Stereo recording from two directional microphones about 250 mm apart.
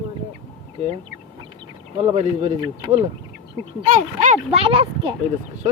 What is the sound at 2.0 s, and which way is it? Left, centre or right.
Speech, right.